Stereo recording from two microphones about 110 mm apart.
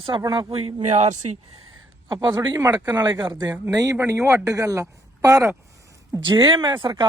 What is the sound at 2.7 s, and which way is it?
Speech, 15° right (ahead or behind).